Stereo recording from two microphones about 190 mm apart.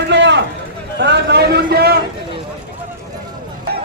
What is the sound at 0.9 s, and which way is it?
A man's voice, 65° right (ahead or behind).